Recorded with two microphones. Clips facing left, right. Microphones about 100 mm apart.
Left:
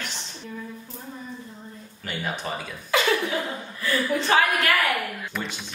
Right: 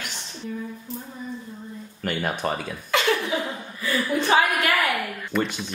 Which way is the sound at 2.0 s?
55° right (ahead or behind).